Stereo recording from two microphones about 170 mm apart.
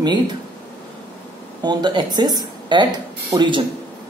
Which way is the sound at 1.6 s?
25° right (ahead or behind).